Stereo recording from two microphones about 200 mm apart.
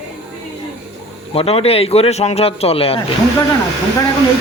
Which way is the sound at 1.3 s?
30° left (ahead or behind).